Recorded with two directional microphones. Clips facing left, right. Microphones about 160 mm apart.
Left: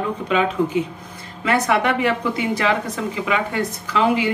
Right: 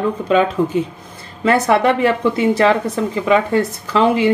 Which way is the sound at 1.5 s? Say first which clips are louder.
Right 5 dB; 35° right (ahead or behind).